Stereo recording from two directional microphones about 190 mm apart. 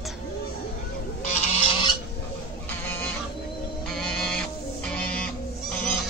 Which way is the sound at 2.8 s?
10° left (ahead or behind).